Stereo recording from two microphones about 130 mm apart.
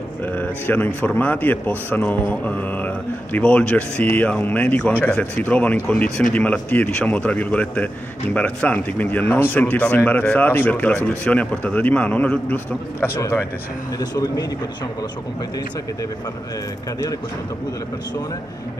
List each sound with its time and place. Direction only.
0.2 s a man's voice: 15° left (ahead or behind); by 14.4 s 30° left (ahead or behind)